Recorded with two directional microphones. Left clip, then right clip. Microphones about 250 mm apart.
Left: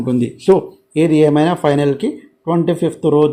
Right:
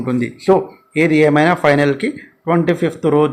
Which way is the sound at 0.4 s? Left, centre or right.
Left.